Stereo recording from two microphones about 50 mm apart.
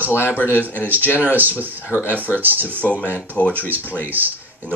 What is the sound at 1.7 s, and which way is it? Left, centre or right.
Speech, left.